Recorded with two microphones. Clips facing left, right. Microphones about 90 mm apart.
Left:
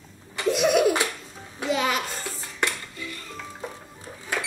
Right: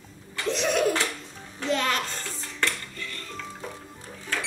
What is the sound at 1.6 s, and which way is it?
Music, 10° left (ahead or behind).